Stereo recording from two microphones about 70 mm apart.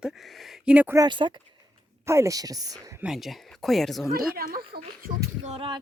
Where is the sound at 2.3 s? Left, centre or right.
Right.